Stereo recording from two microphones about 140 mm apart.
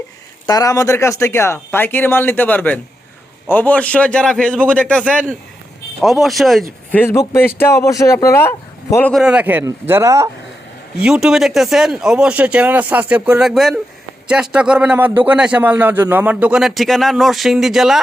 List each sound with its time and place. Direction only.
0.4 s speech: 25° left (ahead or behind); by 6.7 s centre (ahead or behind)
6.9 s speech: 15° left (ahead or behind)
9.1 s a man's voice: 5° right (ahead or behind)
11.0 s a man's voice: 5° right (ahead or behind)